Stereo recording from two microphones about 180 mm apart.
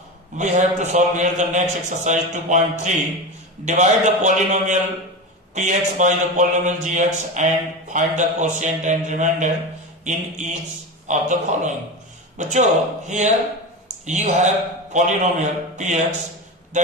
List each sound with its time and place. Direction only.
0.4 s a man's voice: 40° right (ahead or behind)